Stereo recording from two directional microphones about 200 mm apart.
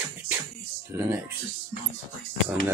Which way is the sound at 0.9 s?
15° right (ahead or behind).